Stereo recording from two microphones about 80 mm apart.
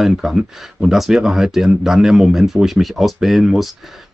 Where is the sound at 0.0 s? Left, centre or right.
Centre.